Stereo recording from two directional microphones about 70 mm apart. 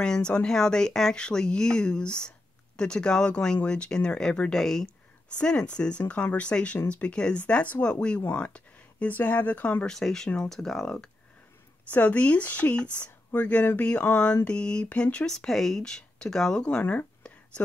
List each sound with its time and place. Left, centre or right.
0.0 s speech: centre
9.8 s speech: centre
11.9 s speech: left
16.5 s speech: centre